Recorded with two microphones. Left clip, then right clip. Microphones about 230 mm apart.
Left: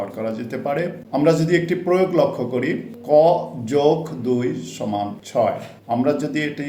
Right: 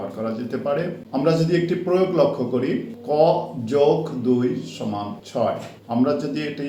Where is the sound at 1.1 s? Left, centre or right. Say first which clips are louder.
Left 3 dB; left.